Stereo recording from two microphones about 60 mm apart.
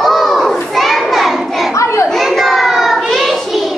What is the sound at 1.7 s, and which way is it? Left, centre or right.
Children playing, left.